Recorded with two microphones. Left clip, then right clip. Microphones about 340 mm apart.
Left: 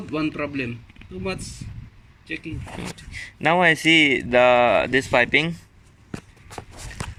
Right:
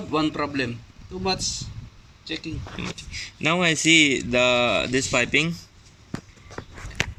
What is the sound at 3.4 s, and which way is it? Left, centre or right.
Speech, left.